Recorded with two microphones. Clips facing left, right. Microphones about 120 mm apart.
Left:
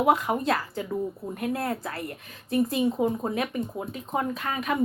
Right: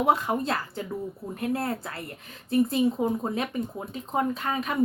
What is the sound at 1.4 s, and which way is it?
Speech, 30° right (ahead or behind).